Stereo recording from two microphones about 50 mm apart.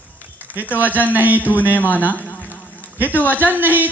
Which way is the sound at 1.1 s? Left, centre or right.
Right.